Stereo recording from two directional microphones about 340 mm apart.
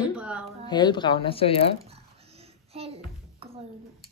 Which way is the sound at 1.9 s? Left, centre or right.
Centre.